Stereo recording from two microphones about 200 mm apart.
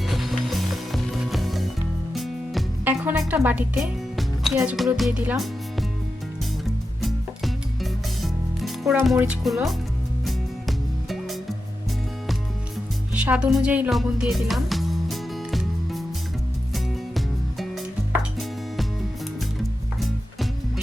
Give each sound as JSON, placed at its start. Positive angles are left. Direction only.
{"t": 0.0, "sound": "music", "side_deg": 0}
{"t": 4.5, "sound": "speech", "side_deg": -5}
{"t": 7.0, "sound": "music", "side_deg": 0}
{"t": 9.4, "sound": "speech", "side_deg": 0}
{"t": 10.2, "sound": "music", "side_deg": 0}
{"t": 13.1, "sound": "music", "side_deg": -5}
{"t": 20.0, "sound": "music", "side_deg": 0}